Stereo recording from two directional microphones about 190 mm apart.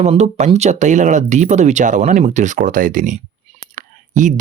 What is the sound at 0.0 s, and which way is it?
Speech, 35° right (ahead or behind).